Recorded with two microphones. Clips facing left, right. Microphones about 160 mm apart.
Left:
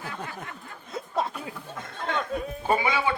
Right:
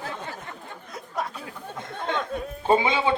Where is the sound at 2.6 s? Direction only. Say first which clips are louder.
Right 4 dB; 25° right (ahead or behind).